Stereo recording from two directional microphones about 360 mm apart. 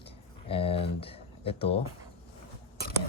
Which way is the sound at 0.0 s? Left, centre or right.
Centre.